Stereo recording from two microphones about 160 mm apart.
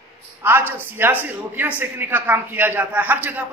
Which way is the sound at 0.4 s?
15° right (ahead or behind).